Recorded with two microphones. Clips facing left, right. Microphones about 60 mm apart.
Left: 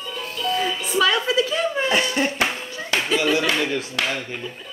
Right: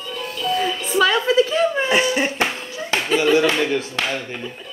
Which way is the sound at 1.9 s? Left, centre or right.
Centre.